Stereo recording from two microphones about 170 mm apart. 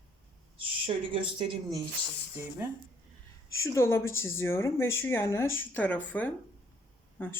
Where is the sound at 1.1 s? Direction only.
30° right (ahead or behind).